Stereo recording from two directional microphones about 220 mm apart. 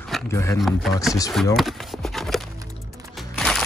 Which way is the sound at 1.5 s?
Centre (ahead or behind).